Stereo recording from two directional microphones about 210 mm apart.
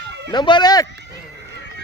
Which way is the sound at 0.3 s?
20° left (ahead or behind).